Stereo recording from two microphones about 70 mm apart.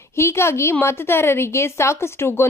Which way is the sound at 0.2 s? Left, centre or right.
Left.